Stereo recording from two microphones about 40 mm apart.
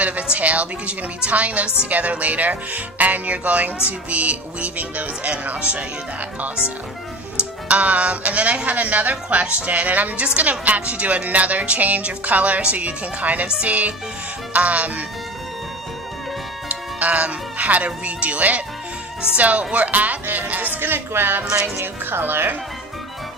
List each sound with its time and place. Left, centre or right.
0.0 s speech: right
7.7 s speech: right
16.6 s speech: right
20.8 s speech: right